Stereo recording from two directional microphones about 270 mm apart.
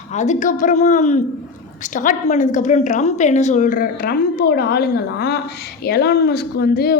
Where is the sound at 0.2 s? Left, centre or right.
Left.